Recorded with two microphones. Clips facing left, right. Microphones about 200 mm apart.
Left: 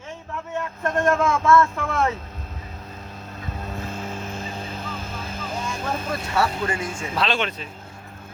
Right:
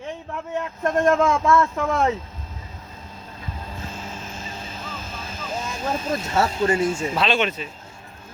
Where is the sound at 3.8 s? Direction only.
60° left (ahead or behind).